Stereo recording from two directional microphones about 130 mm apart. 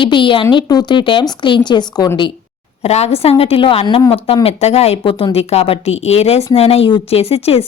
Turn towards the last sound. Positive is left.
turn(degrees=50)  # may be behind; listen again after turning